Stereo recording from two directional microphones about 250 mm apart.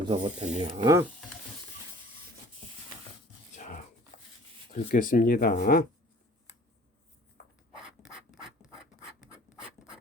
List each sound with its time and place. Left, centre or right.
0.0 s speech: right
0.8 s speech: centre
4.7 s speech: left
7.4 s a sound: left
7.8 s scratch: centre